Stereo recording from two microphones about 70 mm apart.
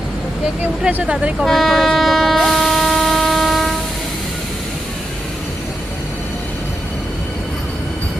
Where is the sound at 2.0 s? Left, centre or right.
Centre.